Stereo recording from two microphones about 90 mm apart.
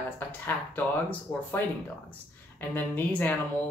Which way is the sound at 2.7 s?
20° left (ahead or behind).